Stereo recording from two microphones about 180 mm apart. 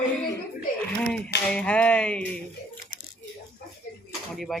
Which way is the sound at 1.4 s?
5° left (ahead or behind).